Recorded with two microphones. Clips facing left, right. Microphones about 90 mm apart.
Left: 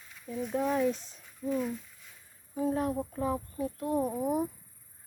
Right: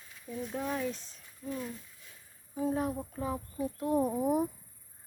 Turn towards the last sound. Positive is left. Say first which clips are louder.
# right 1 dB
turn(degrees=-5)  # may be behind; listen again after turning